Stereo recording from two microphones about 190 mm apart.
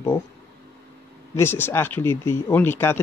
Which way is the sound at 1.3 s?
10° left (ahead or behind).